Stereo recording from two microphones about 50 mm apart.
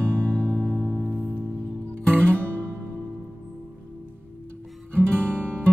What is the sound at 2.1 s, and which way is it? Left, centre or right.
Music, right.